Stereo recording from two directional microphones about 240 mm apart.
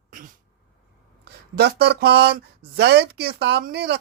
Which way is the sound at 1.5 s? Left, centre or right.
Right.